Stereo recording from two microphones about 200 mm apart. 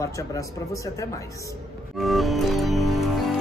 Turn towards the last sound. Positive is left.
turn(degrees=0)  # may be behind; listen again after turning